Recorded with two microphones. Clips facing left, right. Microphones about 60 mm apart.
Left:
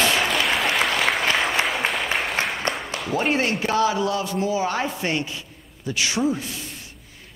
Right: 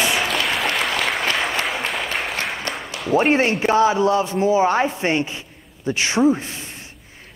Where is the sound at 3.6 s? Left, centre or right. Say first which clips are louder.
Right 6 dB; right.